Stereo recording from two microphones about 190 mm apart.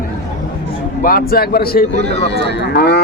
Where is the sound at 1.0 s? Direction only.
50° left (ahead or behind).